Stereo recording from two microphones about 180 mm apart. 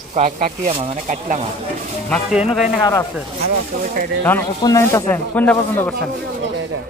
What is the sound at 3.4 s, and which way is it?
Speech, 55° right (ahead or behind).